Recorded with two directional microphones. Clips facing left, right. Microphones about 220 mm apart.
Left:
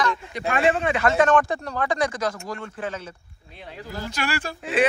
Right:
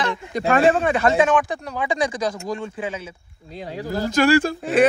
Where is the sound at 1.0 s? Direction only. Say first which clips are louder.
Right 1 dB; 15° right (ahead or behind).